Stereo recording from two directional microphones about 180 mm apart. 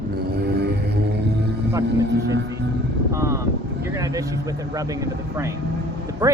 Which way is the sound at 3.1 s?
15° right (ahead or behind).